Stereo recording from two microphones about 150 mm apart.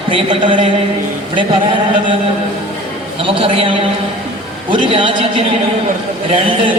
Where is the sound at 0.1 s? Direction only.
35° right (ahead or behind).